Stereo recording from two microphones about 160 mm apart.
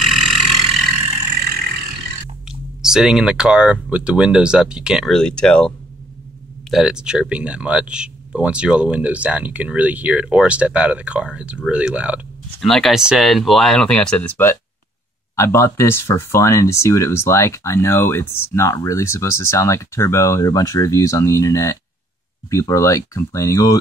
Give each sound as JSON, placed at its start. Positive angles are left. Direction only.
{"t": 0.0, "sound": "vehicle", "side_deg": 0}
{"t": 2.4, "sound": "speech", "side_deg": -5}
{"t": 6.7, "sound": "speech", "side_deg": -5}